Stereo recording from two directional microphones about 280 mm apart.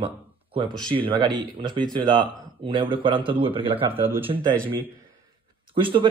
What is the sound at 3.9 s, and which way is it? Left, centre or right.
Speech, centre.